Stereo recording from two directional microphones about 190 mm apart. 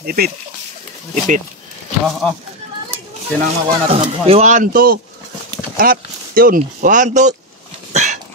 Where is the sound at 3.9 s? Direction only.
35° right (ahead or behind).